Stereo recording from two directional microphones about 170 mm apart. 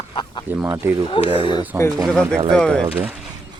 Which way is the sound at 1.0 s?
30° left (ahead or behind).